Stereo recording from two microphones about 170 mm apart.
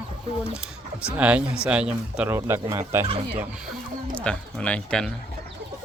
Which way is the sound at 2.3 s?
15° right (ahead or behind).